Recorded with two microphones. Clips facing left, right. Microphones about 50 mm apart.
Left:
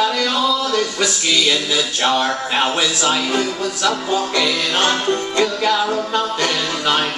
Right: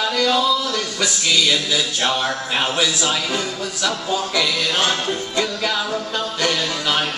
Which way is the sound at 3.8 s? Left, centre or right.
Centre.